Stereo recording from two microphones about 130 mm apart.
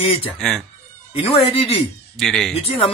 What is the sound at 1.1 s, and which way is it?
Speech, 45° left (ahead or behind).